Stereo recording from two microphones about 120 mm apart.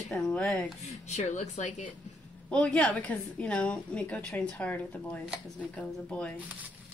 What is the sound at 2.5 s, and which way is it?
A woman's voice, 10° left (ahead or behind).